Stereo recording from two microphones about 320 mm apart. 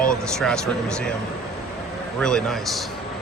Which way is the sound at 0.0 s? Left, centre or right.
Centre.